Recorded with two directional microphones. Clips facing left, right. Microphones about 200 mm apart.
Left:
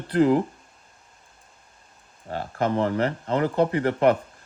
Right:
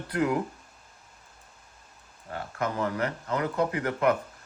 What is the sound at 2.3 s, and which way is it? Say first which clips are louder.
Speech: left 6 dB; 30° left (ahead or behind).